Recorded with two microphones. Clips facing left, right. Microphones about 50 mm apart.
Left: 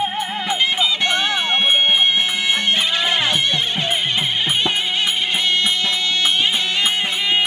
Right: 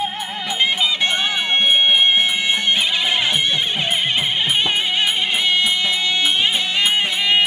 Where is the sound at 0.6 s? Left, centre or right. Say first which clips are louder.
Right 2 dB; centre.